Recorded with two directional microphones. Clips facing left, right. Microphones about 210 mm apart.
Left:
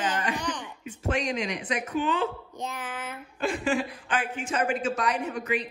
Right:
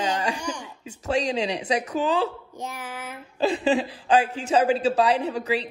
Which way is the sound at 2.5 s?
10° right (ahead or behind).